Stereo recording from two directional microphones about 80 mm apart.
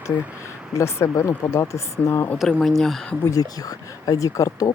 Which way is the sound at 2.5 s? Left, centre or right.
Centre.